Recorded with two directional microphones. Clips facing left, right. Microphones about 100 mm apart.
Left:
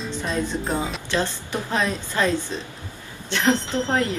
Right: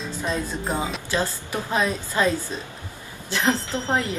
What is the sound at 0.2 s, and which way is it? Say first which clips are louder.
Speech: left 1 dB; centre (ahead or behind).